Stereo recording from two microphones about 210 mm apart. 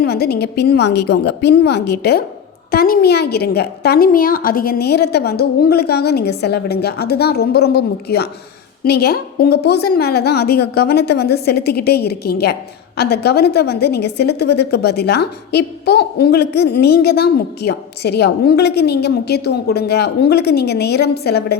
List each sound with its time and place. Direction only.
0.0 s a woman's voice: 50° left (ahead or behind)